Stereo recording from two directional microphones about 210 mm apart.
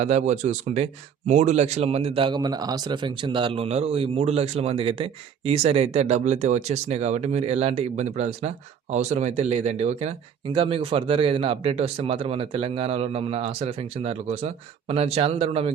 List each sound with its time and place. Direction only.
0.0 s speech: 35° right (ahead or behind)